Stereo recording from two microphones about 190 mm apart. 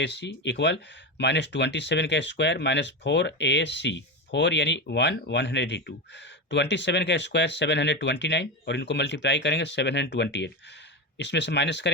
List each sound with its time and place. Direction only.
0.0 s speech: 65° left (ahead or behind)